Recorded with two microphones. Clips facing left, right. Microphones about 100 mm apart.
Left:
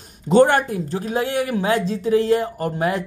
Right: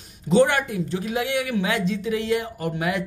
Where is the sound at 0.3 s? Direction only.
45° left (ahead or behind).